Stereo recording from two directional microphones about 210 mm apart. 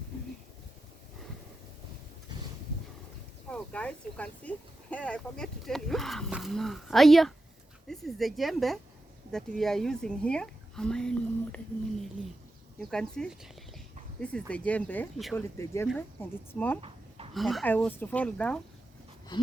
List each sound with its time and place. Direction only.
3.5 s speech: 5° left (ahead or behind)
12.8 s a woman's voice: 5° left (ahead or behind)
16.8 s a sound: 25° right (ahead or behind)
17.3 s speech: centre (ahead or behind)